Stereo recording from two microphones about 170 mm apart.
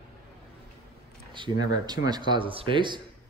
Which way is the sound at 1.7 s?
25° right (ahead or behind).